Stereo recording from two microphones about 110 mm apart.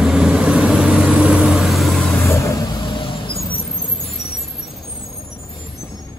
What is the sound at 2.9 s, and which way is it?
Vehicle, 55° left (ahead or behind).